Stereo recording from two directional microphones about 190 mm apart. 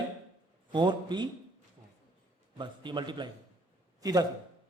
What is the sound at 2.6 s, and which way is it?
A man's voice, 25° right (ahead or behind).